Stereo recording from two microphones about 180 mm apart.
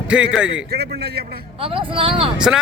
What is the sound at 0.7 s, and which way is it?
Speech, 65° right (ahead or behind).